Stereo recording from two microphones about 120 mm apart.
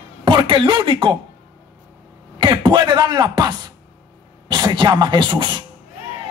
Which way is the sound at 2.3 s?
40° right (ahead or behind).